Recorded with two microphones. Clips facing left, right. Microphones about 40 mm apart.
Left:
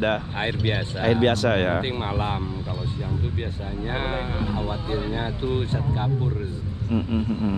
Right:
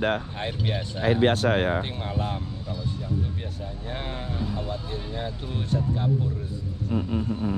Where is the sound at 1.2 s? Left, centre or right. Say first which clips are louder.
Left 1 dB; left.